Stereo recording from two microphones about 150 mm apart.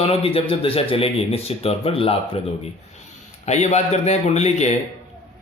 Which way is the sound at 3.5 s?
50° left (ahead or behind).